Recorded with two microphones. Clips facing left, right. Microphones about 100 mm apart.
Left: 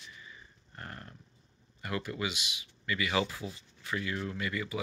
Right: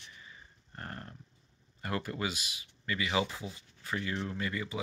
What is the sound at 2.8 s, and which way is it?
Speech, 30° right (ahead or behind).